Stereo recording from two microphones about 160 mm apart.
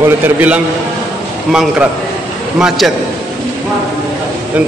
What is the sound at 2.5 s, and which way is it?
Speech, centre (ahead or behind).